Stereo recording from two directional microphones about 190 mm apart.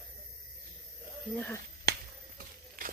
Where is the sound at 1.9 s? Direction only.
55° right (ahead or behind).